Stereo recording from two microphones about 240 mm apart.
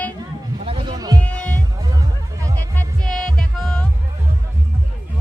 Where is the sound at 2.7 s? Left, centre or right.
Centre.